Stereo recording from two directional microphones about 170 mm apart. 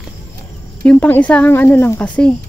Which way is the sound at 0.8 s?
10° left (ahead or behind).